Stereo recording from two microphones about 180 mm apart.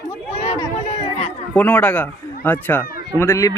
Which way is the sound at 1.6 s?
10° left (ahead or behind).